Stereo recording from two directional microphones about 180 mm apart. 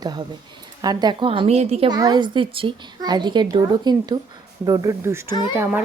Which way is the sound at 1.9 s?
20° right (ahead or behind).